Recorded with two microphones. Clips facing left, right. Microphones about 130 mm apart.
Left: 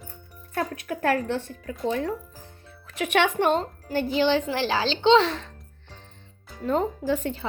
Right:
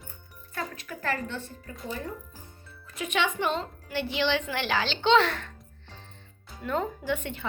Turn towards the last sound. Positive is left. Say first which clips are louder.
# left 5 dB
turn(degrees=35)  # may be behind; listen again after turning